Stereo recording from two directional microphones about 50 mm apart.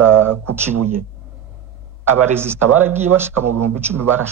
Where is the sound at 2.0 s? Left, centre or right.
Right.